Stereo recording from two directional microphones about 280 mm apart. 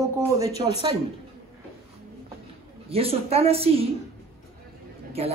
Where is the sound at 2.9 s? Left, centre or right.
Right.